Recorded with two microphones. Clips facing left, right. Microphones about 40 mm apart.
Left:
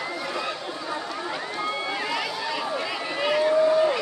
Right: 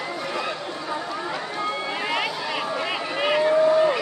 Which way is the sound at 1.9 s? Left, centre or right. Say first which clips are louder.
Right 2 dB; right.